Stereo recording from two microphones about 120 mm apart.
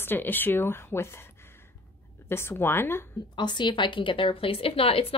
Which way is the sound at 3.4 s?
40° left (ahead or behind).